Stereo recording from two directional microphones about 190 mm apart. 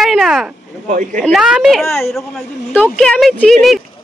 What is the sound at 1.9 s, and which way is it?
Speech, 15° left (ahead or behind).